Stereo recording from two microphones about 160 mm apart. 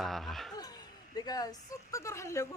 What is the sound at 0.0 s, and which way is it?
Speech, centre (ahead or behind).